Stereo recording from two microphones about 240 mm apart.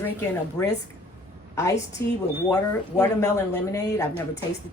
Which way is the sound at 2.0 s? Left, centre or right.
Centre.